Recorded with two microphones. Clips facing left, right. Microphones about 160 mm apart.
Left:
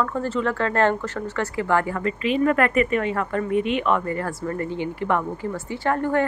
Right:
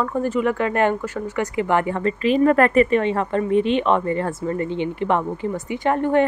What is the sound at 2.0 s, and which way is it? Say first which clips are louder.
A woman's voice: right 4 dB; 35° right (ahead or behind).